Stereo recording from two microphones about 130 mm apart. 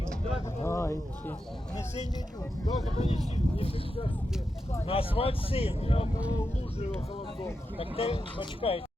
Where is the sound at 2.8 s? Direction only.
55° left (ahead or behind).